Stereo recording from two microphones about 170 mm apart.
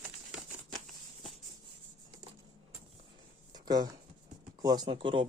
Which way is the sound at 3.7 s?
25° right (ahead or behind).